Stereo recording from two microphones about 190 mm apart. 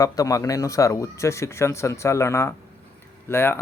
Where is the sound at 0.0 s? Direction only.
20° left (ahead or behind).